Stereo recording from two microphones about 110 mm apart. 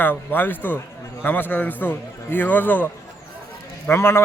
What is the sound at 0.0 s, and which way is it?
A man's voice, 20° left (ahead or behind).